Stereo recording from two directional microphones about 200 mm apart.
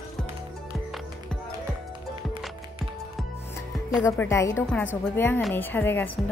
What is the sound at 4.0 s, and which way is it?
A woman's voice, 15° left (ahead or behind).